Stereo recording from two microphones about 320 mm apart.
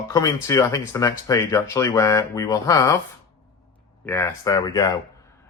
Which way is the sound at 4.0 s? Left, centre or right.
Centre.